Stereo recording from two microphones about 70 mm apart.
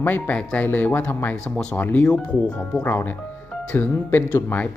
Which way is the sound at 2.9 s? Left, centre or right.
Left.